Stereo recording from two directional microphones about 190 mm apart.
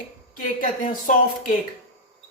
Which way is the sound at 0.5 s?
45° left (ahead or behind).